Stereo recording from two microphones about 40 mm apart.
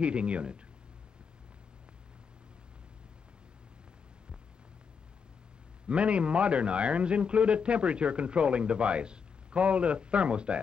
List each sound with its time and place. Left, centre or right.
0.0 s a man's voice: right
5.9 s a man's voice: right